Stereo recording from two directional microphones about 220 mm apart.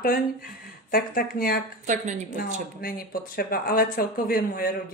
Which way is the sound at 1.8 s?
35° right (ahead or behind).